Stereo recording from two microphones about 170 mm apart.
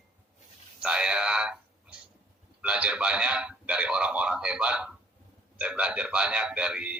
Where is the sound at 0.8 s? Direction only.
5° right (ahead or behind).